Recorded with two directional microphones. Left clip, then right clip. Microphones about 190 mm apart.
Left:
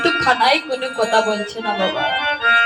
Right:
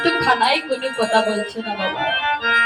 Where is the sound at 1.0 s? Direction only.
30° left (ahead or behind).